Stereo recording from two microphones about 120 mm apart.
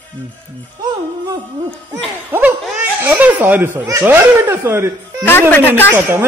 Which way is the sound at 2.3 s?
20° right (ahead or behind).